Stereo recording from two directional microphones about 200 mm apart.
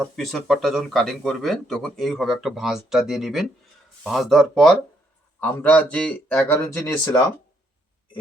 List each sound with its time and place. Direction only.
0.0 s speech: centre (ahead or behind)